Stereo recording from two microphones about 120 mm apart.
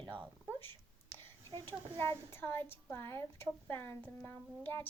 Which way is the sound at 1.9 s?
20° left (ahead or behind).